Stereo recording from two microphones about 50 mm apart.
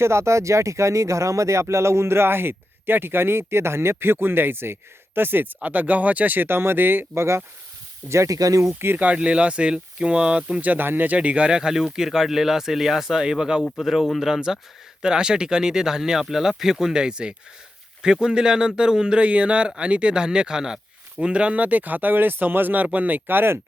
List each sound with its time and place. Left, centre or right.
0.0 s speech: right
5.6 s speech: right
7.2 s speech: right
9.0 s speech: right
10.6 s speech: right